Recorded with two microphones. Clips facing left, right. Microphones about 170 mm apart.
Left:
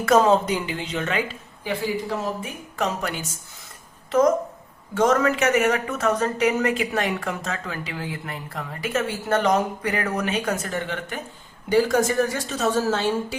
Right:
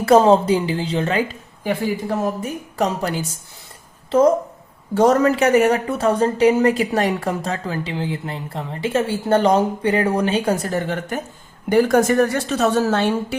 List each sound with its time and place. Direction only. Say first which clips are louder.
0.0 s speech: right 5 dB; 30° right (ahead or behind)
1.6 s speech: right 4 dB; 50° right (ahead or behind)
11.7 s a woman's voice: right 4 dB; 55° right (ahead or behind)